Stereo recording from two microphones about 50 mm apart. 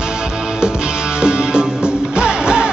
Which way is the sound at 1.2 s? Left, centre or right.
Centre.